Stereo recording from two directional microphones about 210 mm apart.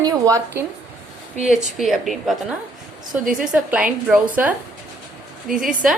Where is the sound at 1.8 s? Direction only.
Centre (ahead or behind).